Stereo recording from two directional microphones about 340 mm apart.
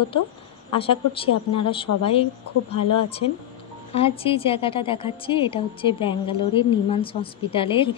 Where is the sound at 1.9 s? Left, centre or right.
Left.